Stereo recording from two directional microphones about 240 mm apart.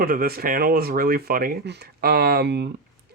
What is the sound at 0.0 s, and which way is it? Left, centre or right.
Speech, right.